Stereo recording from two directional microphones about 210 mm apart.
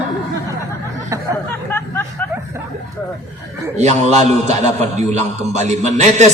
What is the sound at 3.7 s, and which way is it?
A man's voice, 35° right (ahead or behind).